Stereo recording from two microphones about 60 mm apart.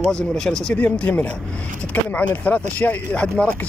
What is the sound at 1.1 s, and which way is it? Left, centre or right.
Speech, left.